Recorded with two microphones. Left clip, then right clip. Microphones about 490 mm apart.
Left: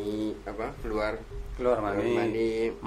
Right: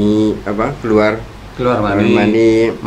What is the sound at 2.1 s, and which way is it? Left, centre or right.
Speech, right.